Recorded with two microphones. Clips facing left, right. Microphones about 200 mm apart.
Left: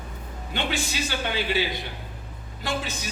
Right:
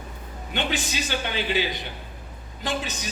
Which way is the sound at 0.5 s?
20° right (ahead or behind).